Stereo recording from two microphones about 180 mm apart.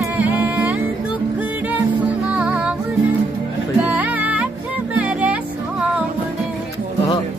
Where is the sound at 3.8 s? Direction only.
10° right (ahead or behind).